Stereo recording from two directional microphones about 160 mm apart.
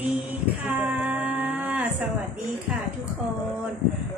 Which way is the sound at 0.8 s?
10° right (ahead or behind).